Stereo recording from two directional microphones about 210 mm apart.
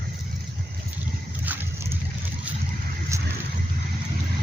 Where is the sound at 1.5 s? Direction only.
10° right (ahead or behind).